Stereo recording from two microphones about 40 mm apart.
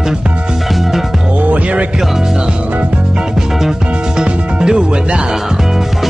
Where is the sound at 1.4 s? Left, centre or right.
Right.